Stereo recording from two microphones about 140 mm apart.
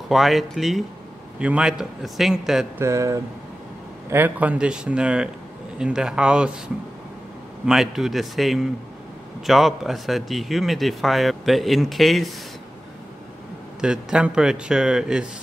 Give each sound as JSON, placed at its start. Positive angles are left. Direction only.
{"t": 0.1, "sound": "a man's voice", "side_deg": 0}
{"t": 2.8, "sound": "a man's voice", "side_deg": -20}
{"t": 7.6, "sound": "a man's voice", "side_deg": -5}
{"t": 13.7, "sound": "a man's voice", "side_deg": -5}